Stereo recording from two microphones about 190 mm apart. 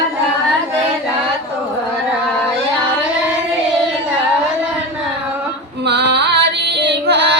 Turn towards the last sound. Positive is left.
turn(degrees=-65)  # may be behind; listen again after turning